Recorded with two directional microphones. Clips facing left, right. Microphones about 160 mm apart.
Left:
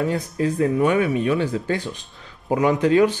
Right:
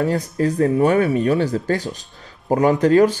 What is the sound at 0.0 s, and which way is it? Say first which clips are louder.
Speech: right 3 dB; 40° right (ahead or behind).